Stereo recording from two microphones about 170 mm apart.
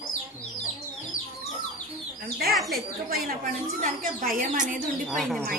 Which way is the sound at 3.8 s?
55° right (ahead or behind).